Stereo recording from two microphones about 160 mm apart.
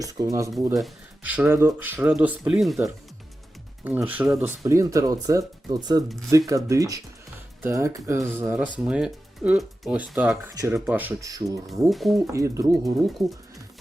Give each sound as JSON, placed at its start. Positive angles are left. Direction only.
{"t": 0.0, "sound": "speech", "side_deg": -20}
{"t": 0.8, "sound": "speech", "side_deg": -10}
{"t": 3.8, "sound": "speech", "side_deg": -10}
{"t": 10.5, "sound": "speech", "side_deg": -20}
{"t": 10.8, "sound": "speech", "side_deg": -10}
{"t": 11.2, "sound": "speech", "side_deg": -20}
{"t": 11.6, "sound": "speech", "side_deg": 0}
{"t": 12.3, "sound": "speech", "side_deg": -20}